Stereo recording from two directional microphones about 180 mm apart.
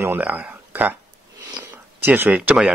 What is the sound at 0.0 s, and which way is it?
Speech, 10° right (ahead or behind).